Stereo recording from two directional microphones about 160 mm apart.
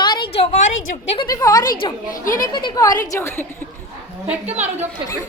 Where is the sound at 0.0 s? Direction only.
30° left (ahead or behind).